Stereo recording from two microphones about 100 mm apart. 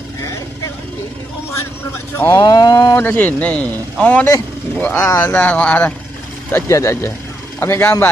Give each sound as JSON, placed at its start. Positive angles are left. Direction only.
{"t": 2.1, "sound": "speech", "side_deg": 25}
{"t": 3.0, "sound": "speech", "side_deg": 20}
{"t": 5.4, "sound": "speech", "side_deg": 15}
{"t": 6.7, "sound": "speech", "side_deg": 30}